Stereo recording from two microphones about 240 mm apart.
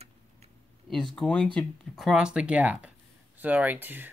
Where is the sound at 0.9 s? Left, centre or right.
Centre.